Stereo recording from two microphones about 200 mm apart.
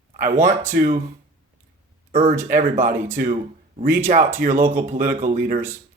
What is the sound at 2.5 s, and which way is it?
Speech, 40° right (ahead or behind).